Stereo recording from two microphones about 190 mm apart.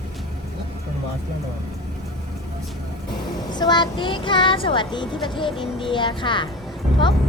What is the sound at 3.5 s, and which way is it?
Speech, 20° left (ahead or behind).